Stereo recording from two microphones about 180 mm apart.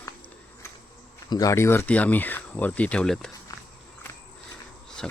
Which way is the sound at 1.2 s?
20° left (ahead or behind).